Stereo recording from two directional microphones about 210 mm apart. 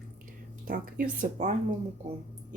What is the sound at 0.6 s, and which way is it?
Speech, 40° right (ahead or behind).